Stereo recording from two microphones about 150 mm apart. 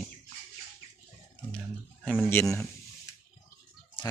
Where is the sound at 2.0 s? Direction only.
10° left (ahead or behind).